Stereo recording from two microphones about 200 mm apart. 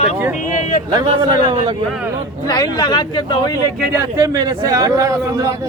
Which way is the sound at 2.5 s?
20° left (ahead or behind).